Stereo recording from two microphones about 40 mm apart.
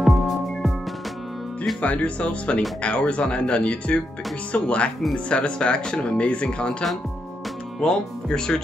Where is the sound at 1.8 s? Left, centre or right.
Left.